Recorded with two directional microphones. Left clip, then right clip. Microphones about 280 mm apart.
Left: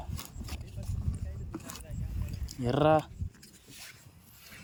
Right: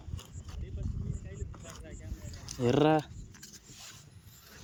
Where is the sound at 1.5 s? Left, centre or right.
Left.